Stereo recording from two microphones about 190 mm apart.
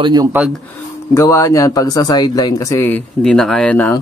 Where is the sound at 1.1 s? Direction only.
15° left (ahead or behind).